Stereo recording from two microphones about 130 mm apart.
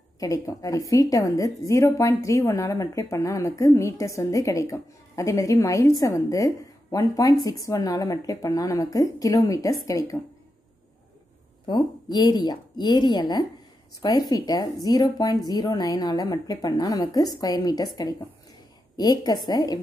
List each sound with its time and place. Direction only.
0.2 s a woman's voice: 25° left (ahead or behind)
11.6 s a woman's voice: 35° left (ahead or behind)